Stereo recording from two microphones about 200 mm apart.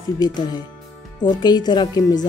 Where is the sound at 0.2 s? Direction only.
20° left (ahead or behind).